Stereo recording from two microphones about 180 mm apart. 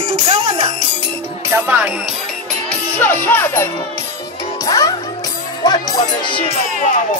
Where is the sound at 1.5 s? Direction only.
10° right (ahead or behind).